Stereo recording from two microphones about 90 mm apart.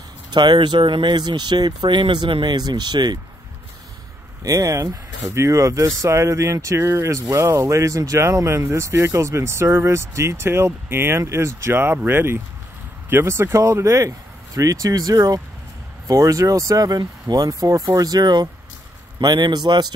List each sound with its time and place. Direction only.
0.3 s speech: 55° right (ahead or behind)
4.4 s speech: 40° right (ahead or behind)